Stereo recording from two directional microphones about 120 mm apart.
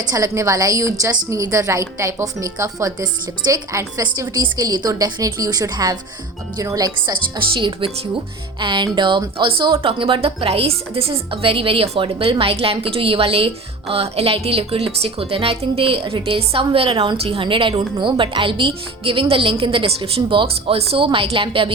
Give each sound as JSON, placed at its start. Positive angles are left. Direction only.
{"t": 0.0, "sound": "a woman's voice", "side_deg": -30}